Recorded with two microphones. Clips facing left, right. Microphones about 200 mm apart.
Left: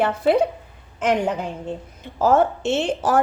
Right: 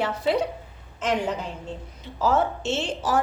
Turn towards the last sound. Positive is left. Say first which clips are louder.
# left 5 dB
turn(degrees=55)  # may be behind; listen again after turning